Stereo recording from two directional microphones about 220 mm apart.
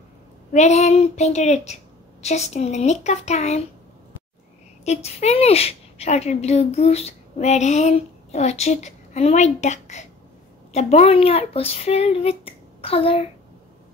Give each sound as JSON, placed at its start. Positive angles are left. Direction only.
{"t": 0.5, "sound": "a woman's voice", "side_deg": 30}
{"t": 4.8, "sound": "a woman's voice", "side_deg": 30}